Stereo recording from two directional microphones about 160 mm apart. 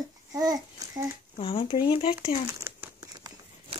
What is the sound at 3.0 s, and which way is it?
Crumpling, 25° right (ahead or behind).